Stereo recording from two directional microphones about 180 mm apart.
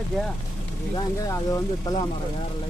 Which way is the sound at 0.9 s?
20° left (ahead or behind).